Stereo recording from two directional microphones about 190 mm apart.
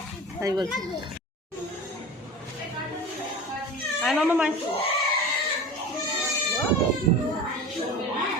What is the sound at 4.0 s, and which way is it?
Speech, centre (ahead or behind).